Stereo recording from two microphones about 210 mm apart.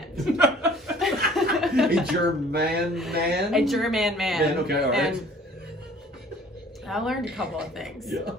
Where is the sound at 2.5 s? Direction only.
50° right (ahead or behind).